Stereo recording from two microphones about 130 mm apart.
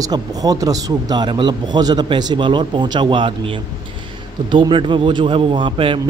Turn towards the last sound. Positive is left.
turn(degrees=-40)  # may be behind; listen again after turning